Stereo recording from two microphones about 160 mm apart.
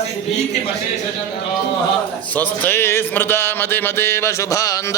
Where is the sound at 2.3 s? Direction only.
10° left (ahead or behind).